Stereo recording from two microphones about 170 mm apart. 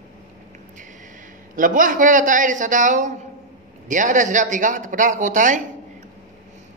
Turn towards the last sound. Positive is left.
turn(degrees=-50)  # may be behind; listen again after turning